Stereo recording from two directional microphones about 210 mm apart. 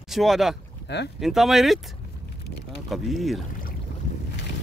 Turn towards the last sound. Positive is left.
turn(degrees=0)  # may be behind; listen again after turning